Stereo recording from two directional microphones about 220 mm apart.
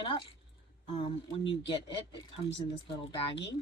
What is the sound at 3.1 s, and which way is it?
Speech, 25° left (ahead or behind).